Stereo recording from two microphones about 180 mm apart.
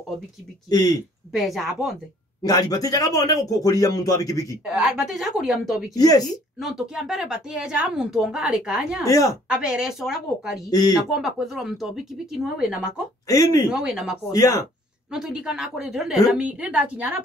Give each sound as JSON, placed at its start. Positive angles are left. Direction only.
{"t": 0.7, "sound": "speech", "side_deg": 20}
{"t": 1.3, "sound": "speech", "side_deg": 0}
{"t": 2.4, "sound": "speech", "side_deg": 20}
{"t": 4.7, "sound": "speech", "side_deg": -5}
{"t": 5.9, "sound": "speech", "side_deg": 20}
{"t": 6.6, "sound": "speech", "side_deg": -5}
{"t": 9.0, "sound": "speech", "side_deg": 20}
{"t": 9.5, "sound": "speech", "side_deg": -5}
{"t": 10.7, "sound": "speech", "side_deg": 20}
{"t": 11.0, "sound": "speech", "side_deg": -5}
{"t": 13.3, "sound": "speech", "side_deg": 20}
{"t": 13.7, "sound": "speech", "side_deg": -5}
{"t": 14.3, "sound": "speech", "side_deg": 20}
{"t": 15.0, "sound": "a woman's voice", "side_deg": -5}